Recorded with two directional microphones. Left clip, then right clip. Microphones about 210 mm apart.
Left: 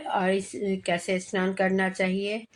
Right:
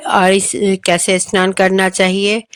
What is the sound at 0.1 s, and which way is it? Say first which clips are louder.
Speech: right 15 dB; 45° right (ahead or behind).